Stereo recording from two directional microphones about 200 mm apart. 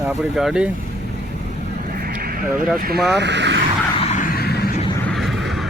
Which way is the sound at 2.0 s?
50° right (ahead or behind).